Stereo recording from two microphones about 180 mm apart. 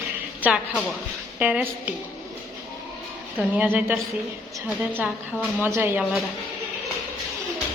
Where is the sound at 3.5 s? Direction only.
5° right (ahead or behind).